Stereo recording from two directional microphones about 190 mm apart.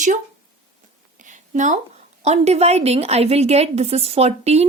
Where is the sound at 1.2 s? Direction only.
40° right (ahead or behind).